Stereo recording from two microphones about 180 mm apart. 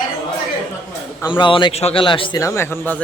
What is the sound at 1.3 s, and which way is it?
A man's voice, 25° left (ahead or behind).